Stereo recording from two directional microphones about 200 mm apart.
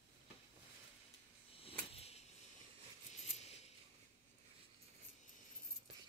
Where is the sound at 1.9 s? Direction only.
30° left (ahead or behind).